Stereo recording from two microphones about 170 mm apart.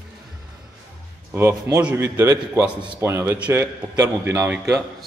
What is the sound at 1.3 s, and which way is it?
A man's voice, 15° right (ahead or behind).